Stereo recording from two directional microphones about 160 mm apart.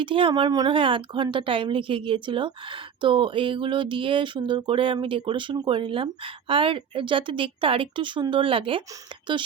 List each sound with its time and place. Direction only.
0.0 s a woman's voice: 35° right (ahead or behind)